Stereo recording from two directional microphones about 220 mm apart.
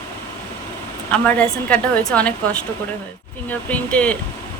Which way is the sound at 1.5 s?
5° left (ahead or behind).